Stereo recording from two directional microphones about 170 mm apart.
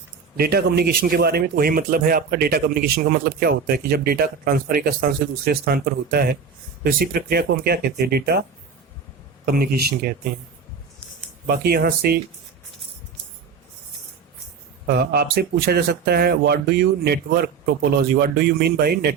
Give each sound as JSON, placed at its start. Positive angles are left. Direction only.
{"t": 0.3, "sound": "speech", "side_deg": -65}
{"t": 9.5, "sound": "speech", "side_deg": -65}
{"t": 11.4, "sound": "speech", "side_deg": -65}
{"t": 14.8, "sound": "speech", "side_deg": -65}